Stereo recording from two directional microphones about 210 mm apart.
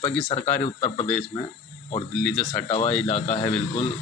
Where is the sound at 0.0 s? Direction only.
5° left (ahead or behind).